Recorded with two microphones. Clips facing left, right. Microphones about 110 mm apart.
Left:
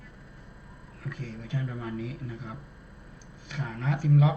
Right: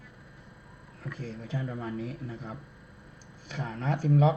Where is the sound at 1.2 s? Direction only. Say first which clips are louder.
Even; 35° right (ahead or behind).